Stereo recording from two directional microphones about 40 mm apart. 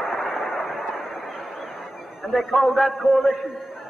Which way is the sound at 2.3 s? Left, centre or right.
Centre.